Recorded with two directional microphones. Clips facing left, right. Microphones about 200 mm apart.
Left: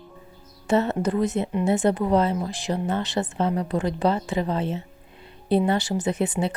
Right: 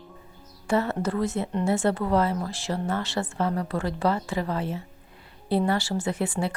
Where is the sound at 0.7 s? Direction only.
20° left (ahead or behind).